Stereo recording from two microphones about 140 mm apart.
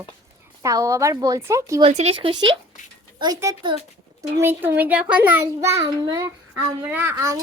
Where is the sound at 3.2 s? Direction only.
25° right (ahead or behind).